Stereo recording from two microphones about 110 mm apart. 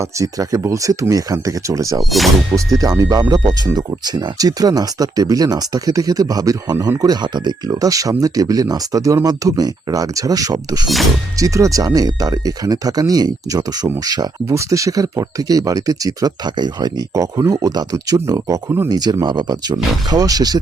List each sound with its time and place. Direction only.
0.2 s speech: 30° right (ahead or behind)
2.0 s speech: centre (ahead or behind)
3.0 s speech: 35° right (ahead or behind)